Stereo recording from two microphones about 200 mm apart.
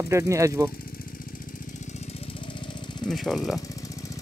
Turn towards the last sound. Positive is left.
turn(degrees=0)  # may be behind; listen again after turning